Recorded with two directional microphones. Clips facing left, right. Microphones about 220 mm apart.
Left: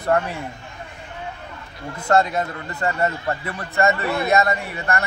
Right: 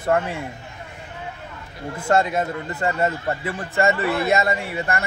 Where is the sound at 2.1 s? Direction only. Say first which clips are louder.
Left 1 dB; 25° right (ahead or behind).